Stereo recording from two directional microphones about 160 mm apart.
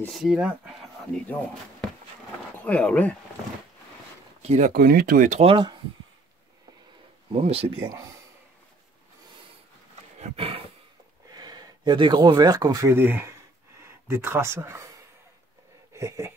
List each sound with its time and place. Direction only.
0.0 s speech: centre (ahead or behind)
1.1 s speech: 5° left (ahead or behind)
4.4 s speech: 45° right (ahead or behind)
4.8 s speech: 70° right (ahead or behind)
5.3 s speech: 35° right (ahead or behind)
7.3 s speech: 40° right (ahead or behind)
10.1 s roaring cats: 40° right (ahead or behind)
11.3 s speech: 25° right (ahead or behind)
15.9 s speech: 20° right (ahead or behind)